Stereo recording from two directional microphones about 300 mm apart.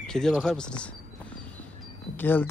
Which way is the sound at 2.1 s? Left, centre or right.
Centre.